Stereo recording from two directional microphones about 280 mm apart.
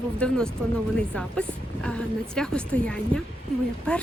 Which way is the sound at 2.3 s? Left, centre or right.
Centre.